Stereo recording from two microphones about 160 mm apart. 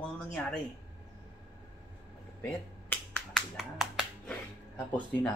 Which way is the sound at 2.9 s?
5° left (ahead or behind).